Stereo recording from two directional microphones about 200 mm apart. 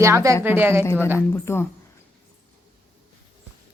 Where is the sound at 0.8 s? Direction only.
10° left (ahead or behind).